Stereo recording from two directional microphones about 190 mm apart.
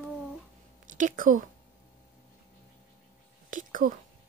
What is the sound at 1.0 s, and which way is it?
Speech, 45° right (ahead or behind).